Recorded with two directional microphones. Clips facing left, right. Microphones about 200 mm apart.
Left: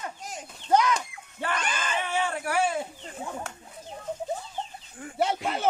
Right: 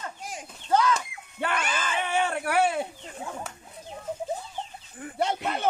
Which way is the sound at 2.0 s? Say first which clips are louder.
Right 4 dB; 60° right (ahead or behind).